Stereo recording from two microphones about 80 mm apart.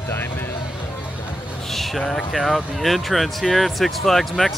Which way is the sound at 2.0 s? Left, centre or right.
Centre.